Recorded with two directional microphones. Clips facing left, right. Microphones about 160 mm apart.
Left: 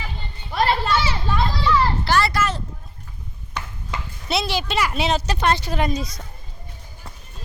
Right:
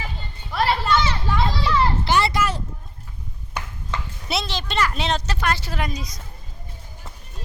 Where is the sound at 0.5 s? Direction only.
Centre (ahead or behind).